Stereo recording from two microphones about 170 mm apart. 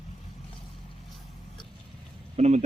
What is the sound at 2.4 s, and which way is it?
Speech, 40° right (ahead or behind).